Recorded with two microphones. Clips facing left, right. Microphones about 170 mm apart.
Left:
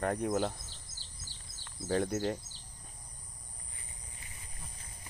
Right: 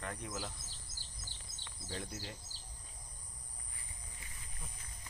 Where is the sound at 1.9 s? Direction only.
55° left (ahead or behind).